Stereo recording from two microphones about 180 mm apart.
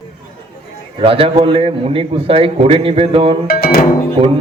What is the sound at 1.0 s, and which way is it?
A man's voice, 30° right (ahead or behind).